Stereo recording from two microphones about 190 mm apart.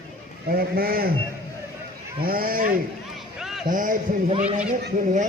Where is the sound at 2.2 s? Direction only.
50° right (ahead or behind).